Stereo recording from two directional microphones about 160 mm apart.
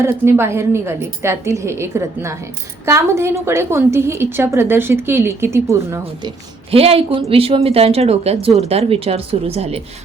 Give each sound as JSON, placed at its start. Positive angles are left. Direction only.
{"t": 0.0, "sound": "a woman's voice", "side_deg": -15}
{"t": 6.7, "sound": "speech", "side_deg": -35}